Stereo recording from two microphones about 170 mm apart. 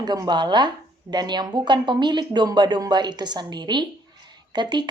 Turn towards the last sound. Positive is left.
turn(degrees=-25)  # may be behind; listen again after turning